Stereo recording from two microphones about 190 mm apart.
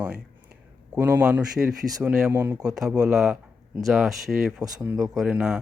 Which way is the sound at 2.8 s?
5° right (ahead or behind).